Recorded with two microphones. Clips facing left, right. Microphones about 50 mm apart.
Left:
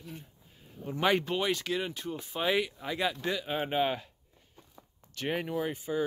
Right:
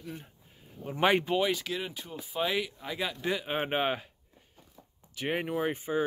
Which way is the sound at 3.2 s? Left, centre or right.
Right.